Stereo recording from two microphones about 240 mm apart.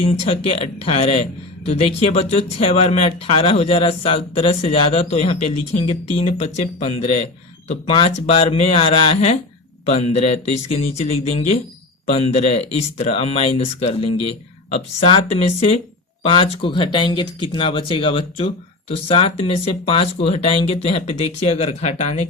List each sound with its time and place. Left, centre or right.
0.0 s speech: left
12.0 s speech: left